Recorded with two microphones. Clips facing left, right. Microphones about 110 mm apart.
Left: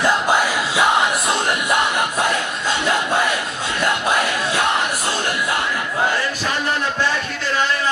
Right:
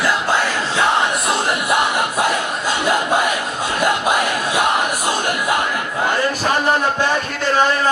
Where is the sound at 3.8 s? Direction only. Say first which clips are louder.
Right 2 dB; 15° right (ahead or behind).